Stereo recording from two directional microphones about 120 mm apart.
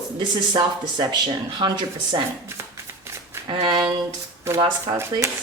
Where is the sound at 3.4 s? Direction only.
40° right (ahead or behind).